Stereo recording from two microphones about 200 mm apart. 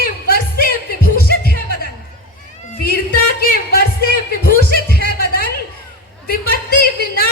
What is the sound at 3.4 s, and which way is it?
Speech, 50° left (ahead or behind).